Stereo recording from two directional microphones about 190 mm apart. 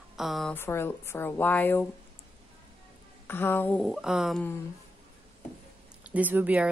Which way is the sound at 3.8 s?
Centre (ahead or behind).